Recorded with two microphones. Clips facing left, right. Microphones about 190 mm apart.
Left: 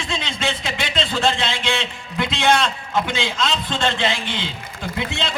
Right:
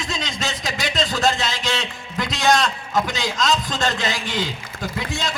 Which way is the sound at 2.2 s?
40° right (ahead or behind).